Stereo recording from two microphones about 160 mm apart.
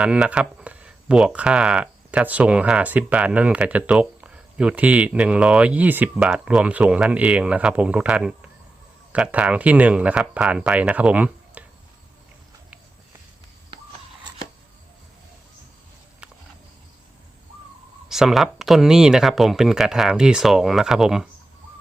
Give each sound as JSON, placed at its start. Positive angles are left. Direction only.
{"t": 0.0, "sound": "speech", "side_deg": -5}
{"t": 16.2, "sound": "a sound", "side_deg": -5}
{"t": 18.1, "sound": "speech", "side_deg": 0}